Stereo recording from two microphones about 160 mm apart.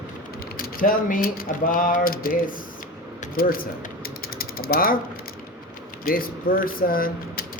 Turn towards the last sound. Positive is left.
turn(degrees=65)  # may be behind; listen again after turning